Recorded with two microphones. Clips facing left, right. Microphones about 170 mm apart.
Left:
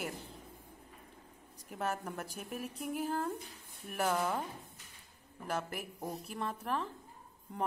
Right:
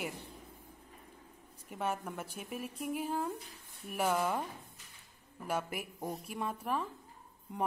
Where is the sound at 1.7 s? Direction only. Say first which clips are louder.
Right 1 dB; centre (ahead or behind).